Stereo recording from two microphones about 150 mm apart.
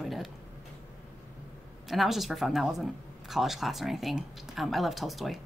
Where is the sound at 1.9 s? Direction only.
Centre (ahead or behind).